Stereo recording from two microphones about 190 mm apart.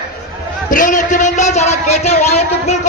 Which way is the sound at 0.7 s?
45° left (ahead or behind).